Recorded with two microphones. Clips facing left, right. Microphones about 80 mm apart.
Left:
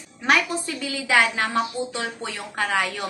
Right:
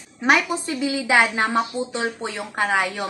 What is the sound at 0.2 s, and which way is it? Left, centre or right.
A woman's voice, centre.